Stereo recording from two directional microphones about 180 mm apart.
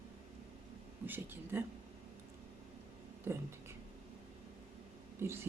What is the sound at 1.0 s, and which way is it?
Speech, 10° right (ahead or behind).